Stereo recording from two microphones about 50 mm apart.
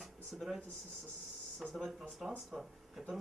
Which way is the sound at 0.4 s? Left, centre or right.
Centre.